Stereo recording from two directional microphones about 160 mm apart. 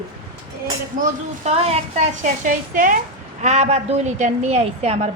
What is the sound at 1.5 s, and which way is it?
Speech, 40° right (ahead or behind).